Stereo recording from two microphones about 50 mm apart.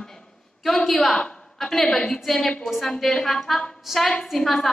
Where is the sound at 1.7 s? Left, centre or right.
Centre.